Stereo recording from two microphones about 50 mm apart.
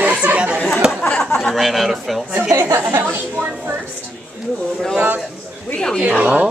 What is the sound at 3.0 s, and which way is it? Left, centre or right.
Speech, right.